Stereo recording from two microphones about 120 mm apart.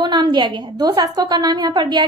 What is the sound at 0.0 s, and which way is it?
A woman's voice, 40° right (ahead or behind).